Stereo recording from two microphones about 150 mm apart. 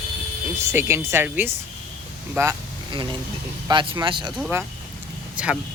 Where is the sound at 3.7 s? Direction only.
30° right (ahead or behind).